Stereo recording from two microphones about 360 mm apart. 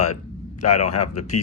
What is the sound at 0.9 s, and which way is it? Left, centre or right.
Speech, left.